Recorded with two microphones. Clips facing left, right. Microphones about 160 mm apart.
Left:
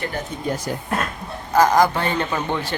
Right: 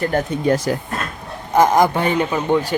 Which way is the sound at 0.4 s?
90° right.